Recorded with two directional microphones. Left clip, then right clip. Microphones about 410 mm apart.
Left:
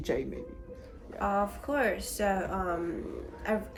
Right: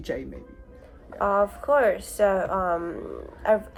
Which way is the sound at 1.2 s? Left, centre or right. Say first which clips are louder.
Right 7 dB; centre.